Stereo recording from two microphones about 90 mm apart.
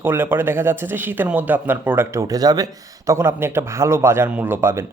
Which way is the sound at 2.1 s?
45° right (ahead or behind).